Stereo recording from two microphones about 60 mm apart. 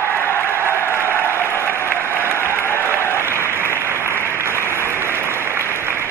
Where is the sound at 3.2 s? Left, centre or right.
Right.